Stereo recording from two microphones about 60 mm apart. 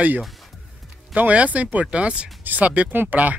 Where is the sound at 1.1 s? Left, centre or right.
Right.